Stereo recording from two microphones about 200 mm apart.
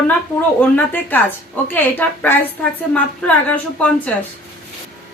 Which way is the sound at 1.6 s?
10° left (ahead or behind).